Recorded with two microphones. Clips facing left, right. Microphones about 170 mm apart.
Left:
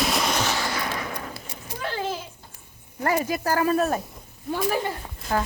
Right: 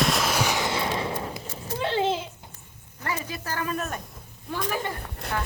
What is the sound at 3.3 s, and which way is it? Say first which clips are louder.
Speech: left 8 dB; 40° left (ahead or behind).